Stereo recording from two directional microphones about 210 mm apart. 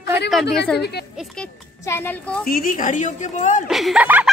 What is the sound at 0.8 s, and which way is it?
Speech, 50° left (ahead or behind).